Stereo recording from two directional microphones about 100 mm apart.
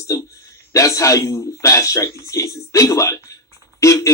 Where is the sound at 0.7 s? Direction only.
30° left (ahead or behind).